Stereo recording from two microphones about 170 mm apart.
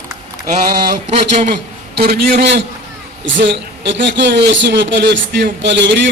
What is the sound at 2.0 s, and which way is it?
Speech, 70° right (ahead or behind).